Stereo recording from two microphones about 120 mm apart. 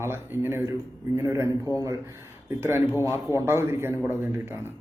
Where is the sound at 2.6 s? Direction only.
20° right (ahead or behind).